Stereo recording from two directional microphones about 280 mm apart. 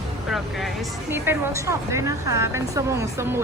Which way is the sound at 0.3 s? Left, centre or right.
Centre.